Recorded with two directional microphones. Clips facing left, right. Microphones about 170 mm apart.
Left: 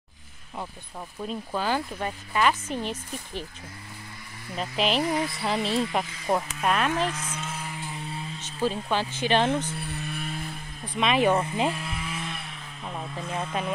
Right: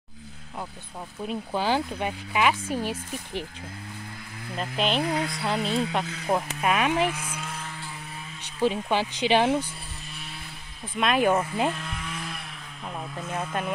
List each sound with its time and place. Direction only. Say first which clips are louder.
1.2 s speech: right 2 dB; 15° right (ahead or behind)
4.6 s speech: even; centre (ahead or behind)
7.4 s chainsaw: left 1 dB; 5° left (ahead or behind)
8.6 s speech: right 2 dB; 15° right (ahead or behind)
9.8 s music: left 9 dB; 60° left (ahead or behind)
11.0 s speech: even; centre (ahead or behind)
11.7 s vehicle: left 1 dB; 5° left (ahead or behind)
12.8 s speech: even; centre (ahead or behind)